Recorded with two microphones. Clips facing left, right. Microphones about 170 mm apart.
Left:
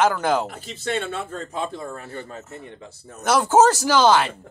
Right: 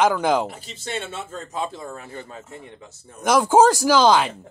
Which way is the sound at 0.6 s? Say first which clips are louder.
Left 4 dB; 55° left (ahead or behind).